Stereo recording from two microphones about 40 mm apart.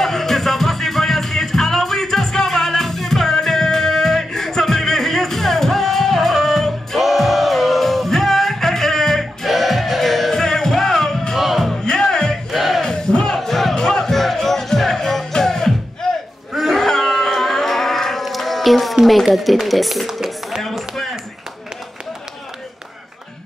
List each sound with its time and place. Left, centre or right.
0.0 s music: centre
11.3 s music: centre
11.8 s music: centre
12.4 s music: centre
12.8 s battle cry: centre
13.3 s music: centre
16.0 s crowd: centre
16.7 s a sound: centre
19.2 s speech: centre
20.9 s a sound: centre